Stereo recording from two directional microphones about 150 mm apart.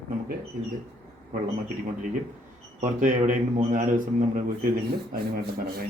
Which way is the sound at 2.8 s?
55° right (ahead or behind).